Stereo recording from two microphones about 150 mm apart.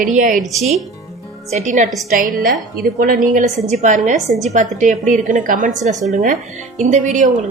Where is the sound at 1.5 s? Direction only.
50° right (ahead or behind).